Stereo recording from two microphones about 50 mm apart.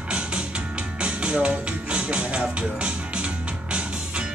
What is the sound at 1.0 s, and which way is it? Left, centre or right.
Music, right.